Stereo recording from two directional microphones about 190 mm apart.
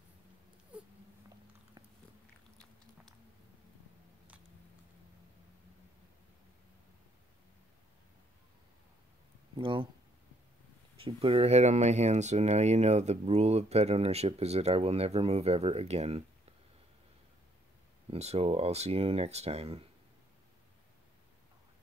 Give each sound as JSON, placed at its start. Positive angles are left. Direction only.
{"t": 2.5, "sound": "biting", "side_deg": 5}
{"t": 9.6, "sound": "speech", "side_deg": -25}
{"t": 11.1, "sound": "speech", "side_deg": -30}
{"t": 18.1, "sound": "speech", "side_deg": -35}